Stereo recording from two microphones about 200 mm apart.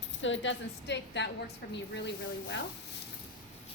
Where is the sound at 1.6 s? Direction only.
50° left (ahead or behind).